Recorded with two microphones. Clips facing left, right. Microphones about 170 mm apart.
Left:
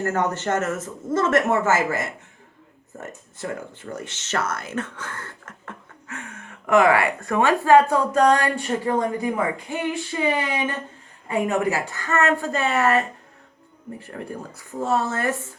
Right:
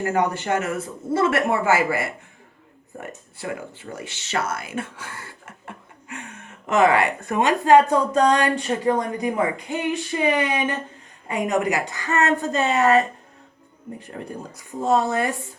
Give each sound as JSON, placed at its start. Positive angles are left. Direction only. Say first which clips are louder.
{"t": 0.0, "sound": "a woman's voice", "louder": "right 1 dB", "side_deg": -15}